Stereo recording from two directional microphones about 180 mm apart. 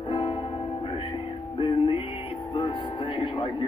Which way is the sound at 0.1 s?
30° left (ahead or behind).